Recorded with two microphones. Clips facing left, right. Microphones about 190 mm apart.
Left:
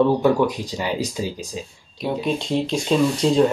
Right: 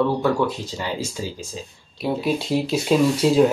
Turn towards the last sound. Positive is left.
turn(degrees=-5)  # may be behind; listen again after turning